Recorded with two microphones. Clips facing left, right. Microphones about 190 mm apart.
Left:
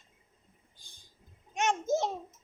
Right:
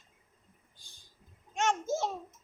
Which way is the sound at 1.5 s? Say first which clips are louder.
Left 2 dB; 20° left (ahead or behind).